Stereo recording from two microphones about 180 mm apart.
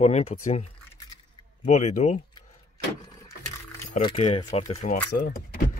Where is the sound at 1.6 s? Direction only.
40° left (ahead or behind).